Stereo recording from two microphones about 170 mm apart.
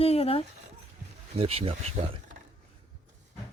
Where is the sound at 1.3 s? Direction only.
35° right (ahead or behind).